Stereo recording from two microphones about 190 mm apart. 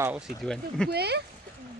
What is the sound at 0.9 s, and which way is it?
Speech, 60° right (ahead or behind).